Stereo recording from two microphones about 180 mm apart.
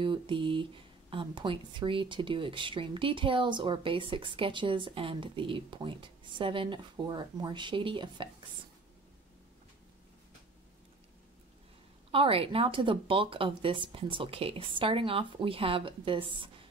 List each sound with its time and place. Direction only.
0.0 s speech: 25° right (ahead or behind)
12.1 s speech: 30° right (ahead or behind)